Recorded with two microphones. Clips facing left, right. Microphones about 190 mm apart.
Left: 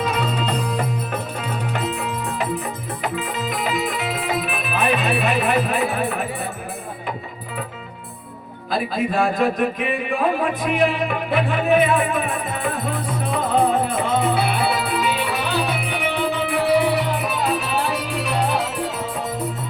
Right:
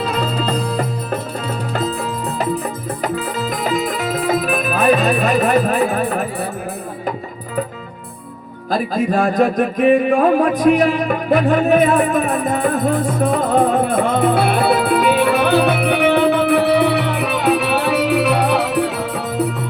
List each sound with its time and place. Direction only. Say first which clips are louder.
0.0 s music: right 3 dB; 35° right (ahead or behind)
3.0 s music: right 4 dB; 40° right (ahead or behind)
8.7 s music: right 4 dB; 45° right (ahead or behind); by 18.9 s 65° right (ahead or behind)